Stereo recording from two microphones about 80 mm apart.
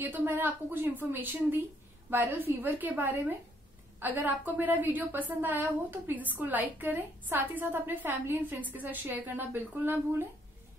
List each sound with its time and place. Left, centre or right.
0.0 s a woman's voice: right